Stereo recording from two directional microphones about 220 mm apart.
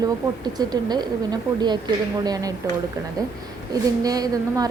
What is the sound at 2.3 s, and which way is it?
Speech, 15° right (ahead or behind).